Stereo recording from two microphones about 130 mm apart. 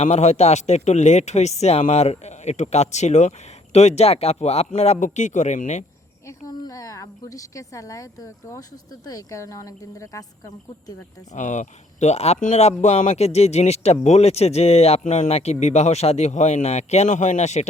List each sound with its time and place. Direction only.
0.0 s speech: 60° left (ahead or behind)
6.5 s speech: 30° left (ahead or behind)
11.3 s speech: 70° left (ahead or behind)